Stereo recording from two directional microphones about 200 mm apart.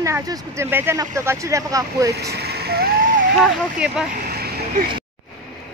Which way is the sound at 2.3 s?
55° right (ahead or behind).